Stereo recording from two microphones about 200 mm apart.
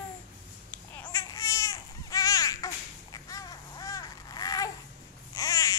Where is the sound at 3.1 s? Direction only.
20° left (ahead or behind).